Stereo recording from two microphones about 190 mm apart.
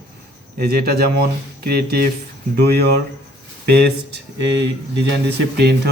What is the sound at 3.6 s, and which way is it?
Speech, 60° right (ahead or behind).